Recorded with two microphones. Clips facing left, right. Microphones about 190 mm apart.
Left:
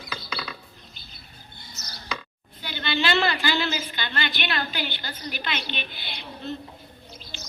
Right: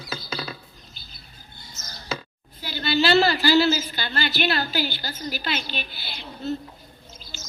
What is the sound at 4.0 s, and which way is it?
A woman's voice, 35° right (ahead or behind).